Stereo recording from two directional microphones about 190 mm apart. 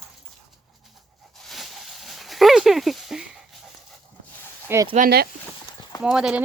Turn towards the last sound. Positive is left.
turn(degrees=-5)  # may be behind; listen again after turning